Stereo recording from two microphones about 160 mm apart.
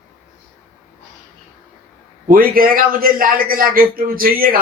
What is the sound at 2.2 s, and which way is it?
A man's voice, 60° right (ahead or behind).